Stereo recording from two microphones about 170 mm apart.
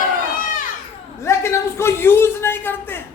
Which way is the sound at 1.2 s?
15° left (ahead or behind).